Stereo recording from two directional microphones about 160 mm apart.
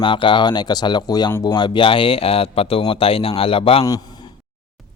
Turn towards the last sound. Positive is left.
turn(degrees=35)  # may be behind; listen again after turning